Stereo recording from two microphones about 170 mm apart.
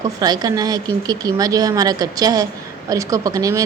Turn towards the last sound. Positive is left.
turn(degrees=-20)  # may be behind; listen again after turning